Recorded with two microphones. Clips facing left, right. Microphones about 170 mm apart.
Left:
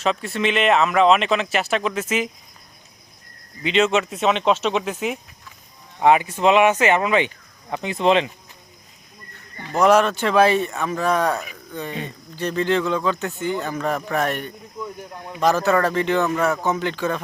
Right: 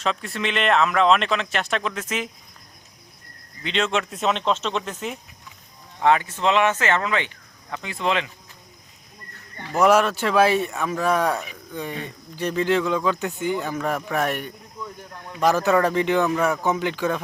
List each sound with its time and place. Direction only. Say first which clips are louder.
0.0 s speech: left 4 dB; centre (ahead or behind)
3.6 s speech: left 5 dB; 5° left (ahead or behind); by 8.3 s 20° left (ahead or behind)
9.7 s speech: left 2 dB; 5° right (ahead or behind)